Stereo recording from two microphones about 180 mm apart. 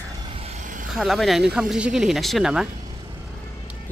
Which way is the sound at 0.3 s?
35° right (ahead or behind).